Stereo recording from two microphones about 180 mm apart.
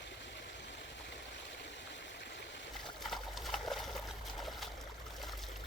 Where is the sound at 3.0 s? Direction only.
Centre (ahead or behind).